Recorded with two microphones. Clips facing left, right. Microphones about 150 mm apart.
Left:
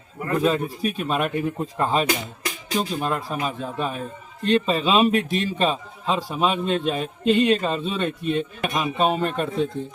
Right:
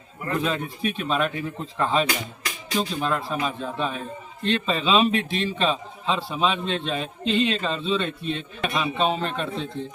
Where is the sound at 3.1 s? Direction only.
5° left (ahead or behind).